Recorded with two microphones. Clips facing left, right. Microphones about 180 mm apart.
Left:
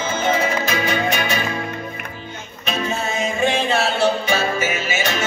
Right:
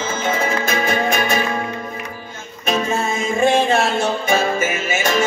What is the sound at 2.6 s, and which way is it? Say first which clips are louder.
Music: right 4 dB; 50° right (ahead or behind).